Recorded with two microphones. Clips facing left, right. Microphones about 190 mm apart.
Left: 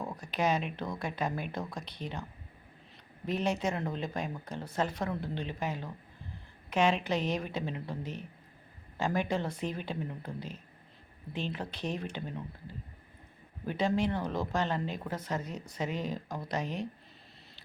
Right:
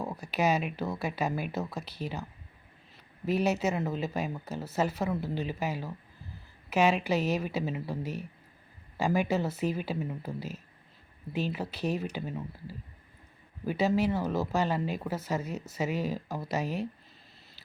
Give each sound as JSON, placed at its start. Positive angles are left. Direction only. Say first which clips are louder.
{"t": 0.0, "sound": "speech", "louder": "right 3 dB", "side_deg": -5}
{"t": 3.2, "sound": "speech", "louder": "right 4 dB", "side_deg": -5}